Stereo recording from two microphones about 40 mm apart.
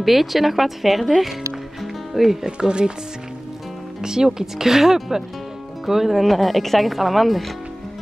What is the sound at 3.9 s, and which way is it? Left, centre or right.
Speech, centre.